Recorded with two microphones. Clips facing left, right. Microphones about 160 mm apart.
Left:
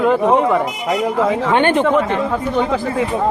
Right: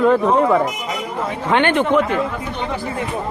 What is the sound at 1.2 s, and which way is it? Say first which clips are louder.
Speech: left 7 dB; 90° left.